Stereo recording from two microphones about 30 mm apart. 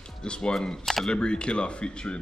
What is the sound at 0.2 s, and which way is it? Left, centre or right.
Speech, left.